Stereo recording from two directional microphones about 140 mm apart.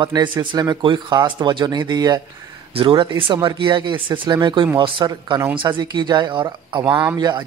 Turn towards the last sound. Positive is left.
turn(degrees=-35)  # may be behind; listen again after turning